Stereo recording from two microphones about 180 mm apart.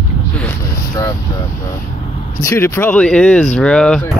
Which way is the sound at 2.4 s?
15° left (ahead or behind).